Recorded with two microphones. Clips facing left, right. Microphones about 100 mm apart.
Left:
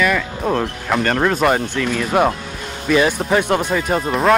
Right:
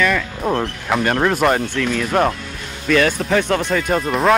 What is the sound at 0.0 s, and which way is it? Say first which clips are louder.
Speech: even; 5° left (ahead or behind).